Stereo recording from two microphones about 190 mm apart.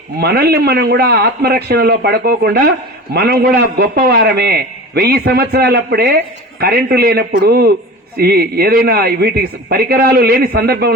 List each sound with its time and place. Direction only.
0.2 s a man's voice: 55° right (ahead or behind)